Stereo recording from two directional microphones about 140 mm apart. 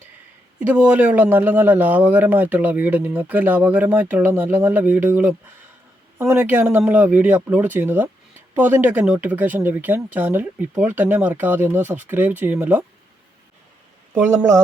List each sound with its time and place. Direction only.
0.6 s a man's voice: 10° right (ahead or behind)
14.1 s speech: 20° right (ahead or behind)